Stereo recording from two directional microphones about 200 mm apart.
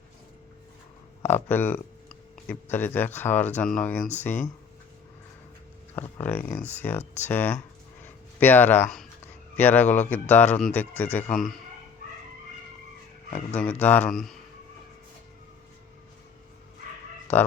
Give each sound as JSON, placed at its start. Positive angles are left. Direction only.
{"t": 1.2, "sound": "speech", "side_deg": 10}
{"t": 5.9, "sound": "speech", "side_deg": 10}
{"t": 13.3, "sound": "speech", "side_deg": 5}